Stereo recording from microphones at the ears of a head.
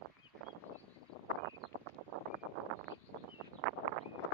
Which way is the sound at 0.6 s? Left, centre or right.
Left.